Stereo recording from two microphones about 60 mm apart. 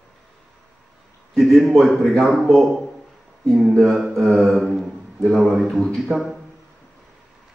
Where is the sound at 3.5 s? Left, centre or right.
Centre.